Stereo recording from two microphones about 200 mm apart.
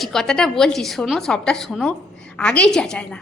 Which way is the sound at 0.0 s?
Centre (ahead or behind).